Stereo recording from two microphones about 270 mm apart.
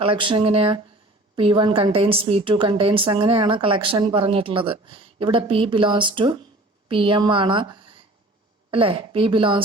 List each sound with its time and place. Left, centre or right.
0.0 s a woman's voice: centre